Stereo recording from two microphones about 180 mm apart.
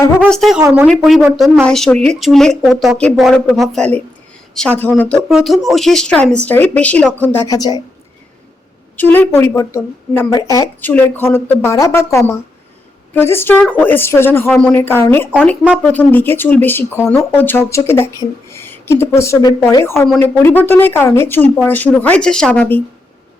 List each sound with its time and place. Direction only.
0.3 s speech: centre (ahead or behind)
0.6 s speech: 10° right (ahead or behind)
0.9 s speech: centre (ahead or behind)
7.5 s a woman's voice: 20° left (ahead or behind)
9.0 s speech: 10° left (ahead or behind)